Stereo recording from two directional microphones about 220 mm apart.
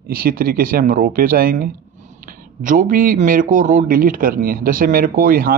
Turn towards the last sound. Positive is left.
turn(degrees=-40)  # may be behind; listen again after turning